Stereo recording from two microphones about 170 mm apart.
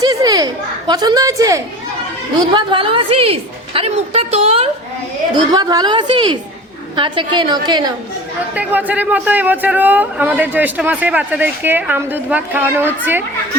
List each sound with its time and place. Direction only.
0.0 s a woman's voice: 20° right (ahead or behind); by 4.7 s 35° right (ahead or behind)
5.5 s a woman's voice: 20° right (ahead or behind)
8.5 s a man's voice: 10° right (ahead or behind)